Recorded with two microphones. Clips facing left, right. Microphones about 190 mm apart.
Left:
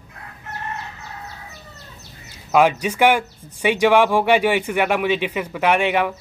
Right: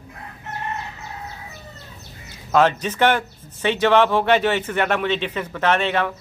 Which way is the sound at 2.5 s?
10° left (ahead or behind).